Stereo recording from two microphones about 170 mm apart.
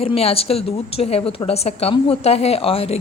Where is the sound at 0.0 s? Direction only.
35° left (ahead or behind).